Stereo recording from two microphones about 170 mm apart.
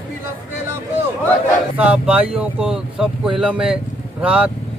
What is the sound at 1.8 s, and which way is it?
Speech, 5° right (ahead or behind).